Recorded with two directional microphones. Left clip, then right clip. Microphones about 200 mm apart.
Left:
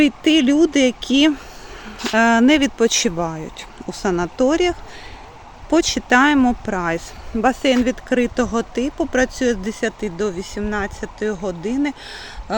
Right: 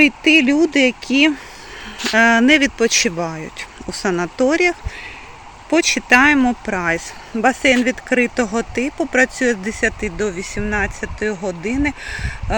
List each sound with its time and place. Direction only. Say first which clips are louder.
0.3 s speech: right 2 dB; 60° right (ahead or behind)
0.5 s speech: even; 10° left (ahead or behind)
0.8 s speech: right 1 dB; 60° right (ahead or behind)
2.0 s speech: right 2 dB; 5° left (ahead or behind)